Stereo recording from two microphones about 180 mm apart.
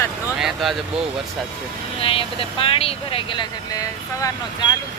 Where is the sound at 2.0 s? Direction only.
30° left (ahead or behind).